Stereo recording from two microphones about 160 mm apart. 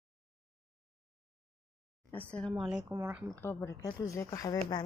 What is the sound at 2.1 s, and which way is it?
Speech, 10° left (ahead or behind).